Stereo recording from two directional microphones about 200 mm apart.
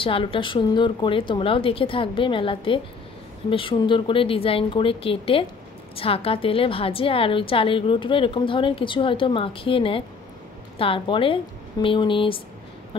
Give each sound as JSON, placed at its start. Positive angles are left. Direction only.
{"t": 0.0, "sound": "a woman's voice", "side_deg": 25}